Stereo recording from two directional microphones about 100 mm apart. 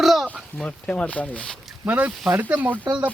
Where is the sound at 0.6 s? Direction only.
10° left (ahead or behind).